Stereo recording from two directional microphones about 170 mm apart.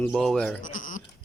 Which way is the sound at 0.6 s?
50° left (ahead or behind).